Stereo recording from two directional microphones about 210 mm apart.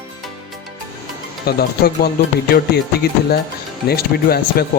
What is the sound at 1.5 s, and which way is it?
Speech, 50° left (ahead or behind).